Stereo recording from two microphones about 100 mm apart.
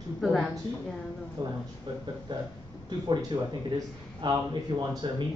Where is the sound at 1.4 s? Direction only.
45° right (ahead or behind).